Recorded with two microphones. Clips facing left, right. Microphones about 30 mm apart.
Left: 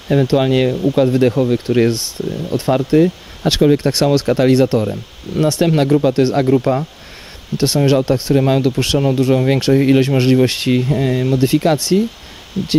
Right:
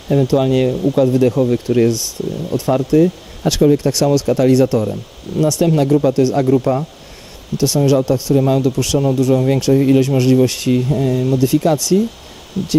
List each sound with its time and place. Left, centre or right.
0.1 s speech: left
1.4 s speech: left
1.8 s speech: left
6.5 s speech: left
7.5 s speech: left
12.6 s speech: centre